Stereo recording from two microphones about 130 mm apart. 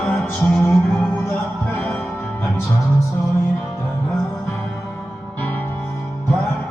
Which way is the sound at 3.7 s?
20° left (ahead or behind).